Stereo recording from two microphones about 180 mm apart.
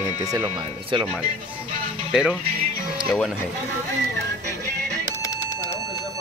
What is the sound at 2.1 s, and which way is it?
Speech, 5° right (ahead or behind).